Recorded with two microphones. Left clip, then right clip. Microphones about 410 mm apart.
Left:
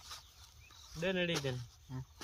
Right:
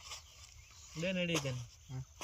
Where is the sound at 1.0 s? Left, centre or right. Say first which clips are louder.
Left 2 dB; centre.